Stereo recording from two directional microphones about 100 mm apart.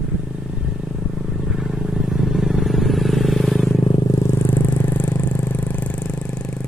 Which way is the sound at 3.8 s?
45° left (ahead or behind).